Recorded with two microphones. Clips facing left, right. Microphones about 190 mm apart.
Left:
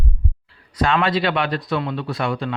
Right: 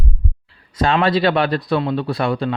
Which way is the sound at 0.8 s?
30° right (ahead or behind).